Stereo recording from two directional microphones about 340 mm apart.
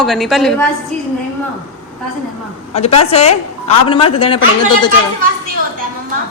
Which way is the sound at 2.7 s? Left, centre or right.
Centre.